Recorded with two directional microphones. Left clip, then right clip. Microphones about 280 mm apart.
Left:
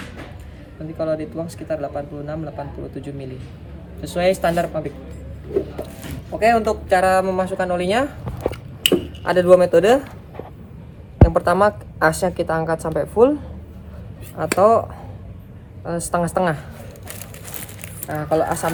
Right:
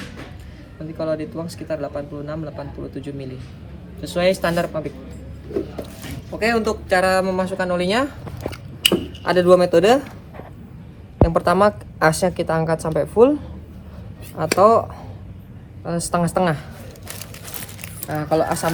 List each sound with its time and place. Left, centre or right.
0.9 s speech: centre
2.9 s speech: centre
5.8 s speech: centre
11.2 s a woman's voice: centre
16.1 s speech: centre
18.1 s speech: centre